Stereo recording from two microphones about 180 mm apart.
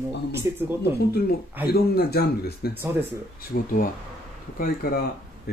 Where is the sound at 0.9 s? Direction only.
60° left (ahead or behind).